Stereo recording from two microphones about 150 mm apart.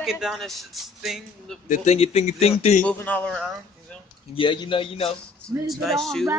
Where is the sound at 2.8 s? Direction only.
10° left (ahead or behind).